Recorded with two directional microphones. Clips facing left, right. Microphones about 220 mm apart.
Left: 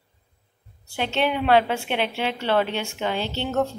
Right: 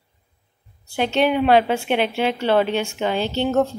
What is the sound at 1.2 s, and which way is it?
A woman's voice, 15° right (ahead or behind).